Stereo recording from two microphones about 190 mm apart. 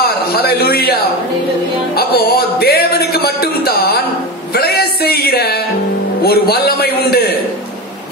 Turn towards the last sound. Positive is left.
turn(degrees=55)  # may be behind; listen again after turning